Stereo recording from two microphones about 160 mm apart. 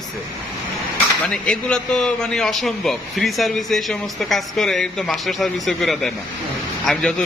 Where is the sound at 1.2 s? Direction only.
5° left (ahead or behind).